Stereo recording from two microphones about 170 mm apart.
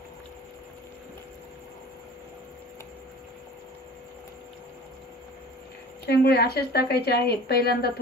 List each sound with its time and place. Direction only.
6.0 s speech: 70° left (ahead or behind)